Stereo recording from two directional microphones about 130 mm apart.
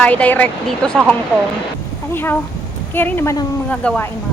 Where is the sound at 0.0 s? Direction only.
10° left (ahead or behind).